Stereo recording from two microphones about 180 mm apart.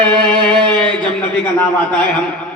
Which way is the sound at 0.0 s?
5° left (ahead or behind).